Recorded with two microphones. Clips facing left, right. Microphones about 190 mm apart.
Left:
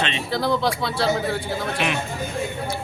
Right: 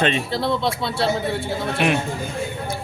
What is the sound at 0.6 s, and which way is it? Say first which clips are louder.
Speech: even; 25° right (ahead or behind).